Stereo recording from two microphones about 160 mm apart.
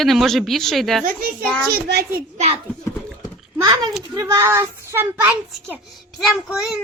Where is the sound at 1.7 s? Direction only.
80° right.